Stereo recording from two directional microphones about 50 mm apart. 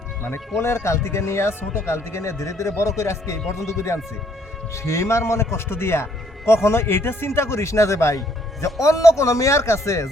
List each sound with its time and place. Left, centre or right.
0.6 s a man's voice: left
3.0 s a man's voice: left